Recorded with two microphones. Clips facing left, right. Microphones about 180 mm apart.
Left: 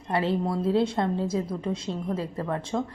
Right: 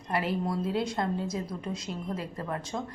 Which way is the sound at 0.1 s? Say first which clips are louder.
Left 4 dB; 25° left (ahead or behind).